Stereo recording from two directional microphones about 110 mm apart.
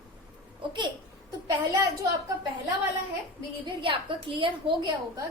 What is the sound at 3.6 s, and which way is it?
A woman's voice, 50° right (ahead or behind).